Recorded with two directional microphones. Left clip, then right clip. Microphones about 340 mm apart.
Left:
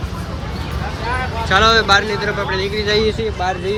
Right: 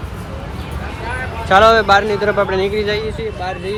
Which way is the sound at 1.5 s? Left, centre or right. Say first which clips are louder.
Right 3 dB; centre.